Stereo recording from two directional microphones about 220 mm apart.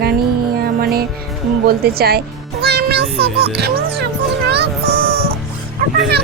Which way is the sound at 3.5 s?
45° right (ahead or behind).